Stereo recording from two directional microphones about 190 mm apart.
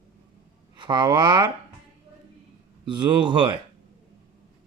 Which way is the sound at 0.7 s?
25° right (ahead or behind).